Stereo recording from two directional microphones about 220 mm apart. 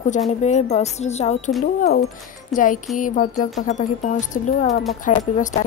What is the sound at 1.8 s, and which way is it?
Speech, 45° left (ahead or behind).